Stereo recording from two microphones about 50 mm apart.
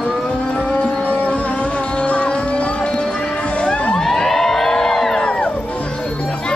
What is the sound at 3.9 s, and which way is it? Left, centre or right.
Crowd, centre.